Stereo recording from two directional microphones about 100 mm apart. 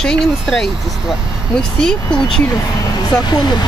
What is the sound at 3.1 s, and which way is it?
Speech, 45° left (ahead or behind).